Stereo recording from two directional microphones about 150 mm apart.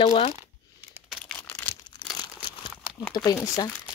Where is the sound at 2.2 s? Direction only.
30° left (ahead or behind).